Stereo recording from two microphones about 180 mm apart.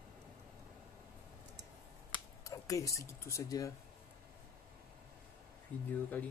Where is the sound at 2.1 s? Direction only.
20° left (ahead or behind).